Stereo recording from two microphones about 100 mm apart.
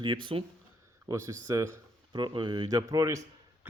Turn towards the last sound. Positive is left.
turn(degrees=-35)  # may be behind; listen again after turning